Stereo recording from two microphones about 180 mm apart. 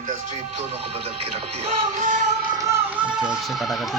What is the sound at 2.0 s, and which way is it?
Music, 45° right (ahead or behind).